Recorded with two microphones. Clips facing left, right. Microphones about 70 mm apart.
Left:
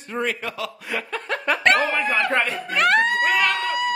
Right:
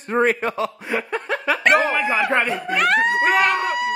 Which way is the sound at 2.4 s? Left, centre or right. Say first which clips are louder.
Right 4 dB; right.